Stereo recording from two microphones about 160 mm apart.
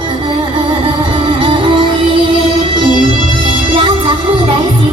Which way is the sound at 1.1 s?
30° right (ahead or behind).